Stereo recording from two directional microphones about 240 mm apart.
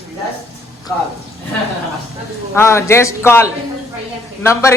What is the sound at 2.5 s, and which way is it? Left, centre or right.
A woman's voice, centre.